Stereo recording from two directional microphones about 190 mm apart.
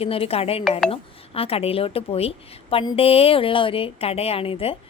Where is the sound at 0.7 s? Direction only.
Centre (ahead or behind).